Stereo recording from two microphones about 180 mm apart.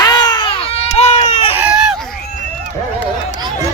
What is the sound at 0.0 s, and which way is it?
Baby cry, 25° left (ahead or behind).